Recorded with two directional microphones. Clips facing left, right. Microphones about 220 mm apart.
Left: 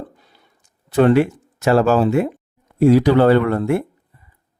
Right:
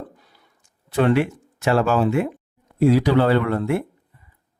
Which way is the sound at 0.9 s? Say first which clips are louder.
Left 5 dB; 40° left (ahead or behind).